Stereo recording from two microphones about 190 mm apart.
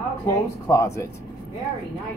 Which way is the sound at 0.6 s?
15° left (ahead or behind).